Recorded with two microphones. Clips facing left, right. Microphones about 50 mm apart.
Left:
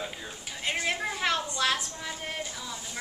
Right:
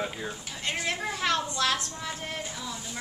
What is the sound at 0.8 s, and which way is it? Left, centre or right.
A woman's voice, centre.